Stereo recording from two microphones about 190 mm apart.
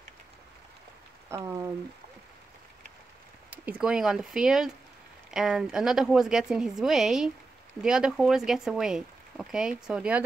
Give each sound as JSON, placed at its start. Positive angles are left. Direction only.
{"t": 1.3, "sound": "speech", "side_deg": -15}
{"t": 3.4, "sound": "speech", "side_deg": -10}